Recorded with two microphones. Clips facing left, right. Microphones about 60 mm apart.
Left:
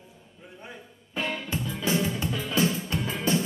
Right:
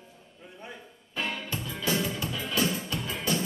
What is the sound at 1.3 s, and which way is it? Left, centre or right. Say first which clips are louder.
Music: left 3 dB; left.